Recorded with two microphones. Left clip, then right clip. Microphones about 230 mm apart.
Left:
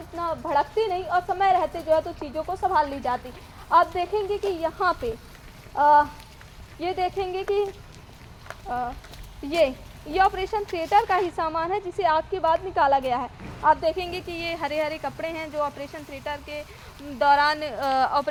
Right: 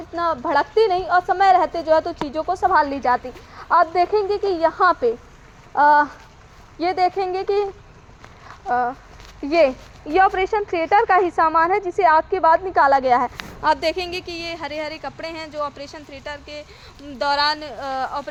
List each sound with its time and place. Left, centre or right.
0.2 s a woman's voice: right
8.6 s speech: right
10.2 s speech: right
13.9 s speech: centre
17.6 s speech: centre